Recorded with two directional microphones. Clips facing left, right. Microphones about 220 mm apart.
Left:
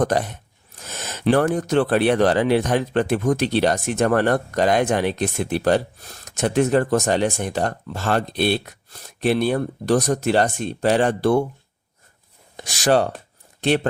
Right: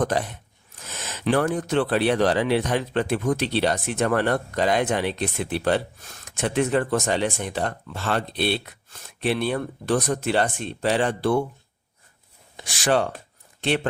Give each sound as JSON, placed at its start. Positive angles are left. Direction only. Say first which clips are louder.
{"t": 0.0, "sound": "speech", "louder": "left 3 dB", "side_deg": 45}
{"t": 12.5, "sound": "speech", "louder": "left 4 dB", "side_deg": 40}